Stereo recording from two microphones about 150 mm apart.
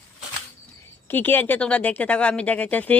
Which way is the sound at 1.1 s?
15° left (ahead or behind).